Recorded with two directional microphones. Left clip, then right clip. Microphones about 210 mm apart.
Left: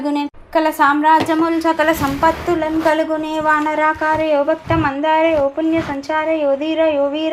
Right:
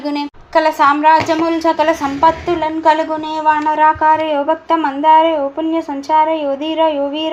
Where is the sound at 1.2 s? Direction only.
10° left (ahead or behind).